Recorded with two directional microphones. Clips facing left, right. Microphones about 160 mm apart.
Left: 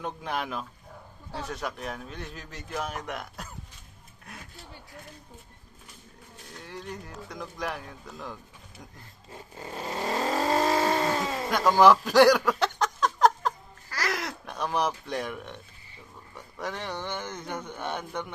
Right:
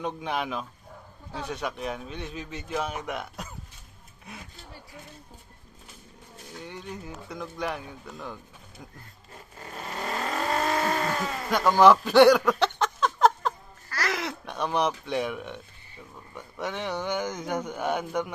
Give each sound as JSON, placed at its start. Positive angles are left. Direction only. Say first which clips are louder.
{"t": 0.0, "sound": "speech", "louder": "right 2 dB", "side_deg": 0}
{"t": 6.6, "sound": "speech", "louder": "right 1 dB", "side_deg": 0}
{"t": 9.3, "sound": "vehicle", "louder": "left 3 dB", "side_deg": 30}
{"t": 11.3, "sound": "a sound", "louder": "right 1 dB", "side_deg": 0}
{"t": 14.1, "sound": "speech", "louder": "right 2 dB", "side_deg": 0}
{"t": 16.6, "sound": "speech", "louder": "right 3 dB", "side_deg": -5}